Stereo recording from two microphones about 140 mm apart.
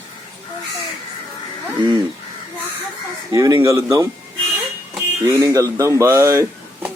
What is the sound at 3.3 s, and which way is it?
Speech, 25° right (ahead or behind).